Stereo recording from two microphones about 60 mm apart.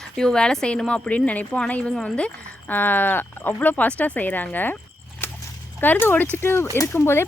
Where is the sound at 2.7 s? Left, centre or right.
Left.